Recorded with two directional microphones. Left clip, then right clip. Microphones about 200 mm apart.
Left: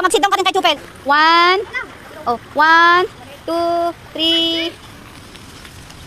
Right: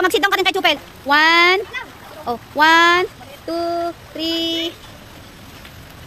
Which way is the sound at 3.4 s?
10° left (ahead or behind).